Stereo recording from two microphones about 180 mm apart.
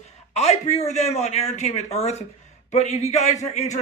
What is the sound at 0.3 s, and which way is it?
Speech, 35° left (ahead or behind).